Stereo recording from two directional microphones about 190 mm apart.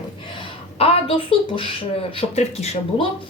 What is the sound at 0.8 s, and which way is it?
Speech, 30° left (ahead or behind).